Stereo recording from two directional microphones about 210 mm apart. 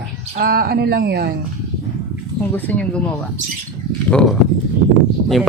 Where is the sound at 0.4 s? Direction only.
45° right (ahead or behind).